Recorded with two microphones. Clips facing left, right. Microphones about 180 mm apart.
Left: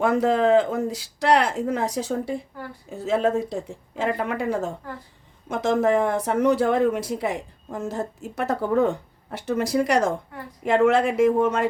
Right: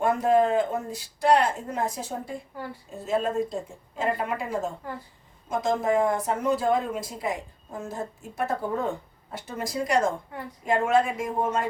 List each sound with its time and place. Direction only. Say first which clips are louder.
0.0 s speech: left 2 dB; 85° left